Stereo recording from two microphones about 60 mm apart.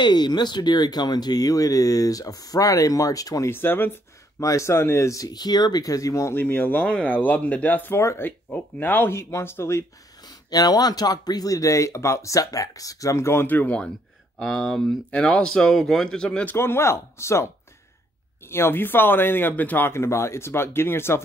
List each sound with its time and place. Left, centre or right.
1.3 s speech: left
3.4 s speech: left
4.4 s speech: left
6.3 s speech: left
7.9 s speech: left
8.5 s speech: left
9.1 s speech: left
10.2 s speech: left
13.5 s speech: left
14.4 s speech: centre
15.0 s speech: centre
16.5 s speech: left
18.5 s speech: left
19.9 s speech: left